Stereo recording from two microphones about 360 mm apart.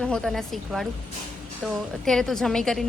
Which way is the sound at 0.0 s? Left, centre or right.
Centre.